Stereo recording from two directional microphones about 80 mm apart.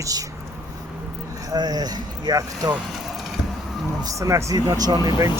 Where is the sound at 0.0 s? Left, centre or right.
Right.